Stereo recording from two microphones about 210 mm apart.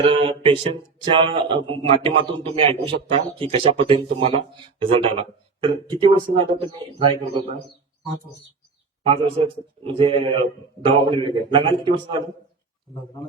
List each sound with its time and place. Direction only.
0.0 s speech: 25° right (ahead or behind)
9.0 s speech: 25° right (ahead or behind)